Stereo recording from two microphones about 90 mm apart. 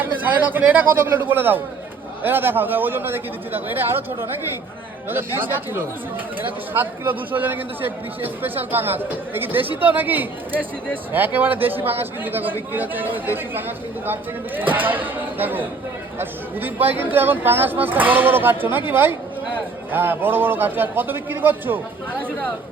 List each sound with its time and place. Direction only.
0.0 s speech: 20° right (ahead or behind)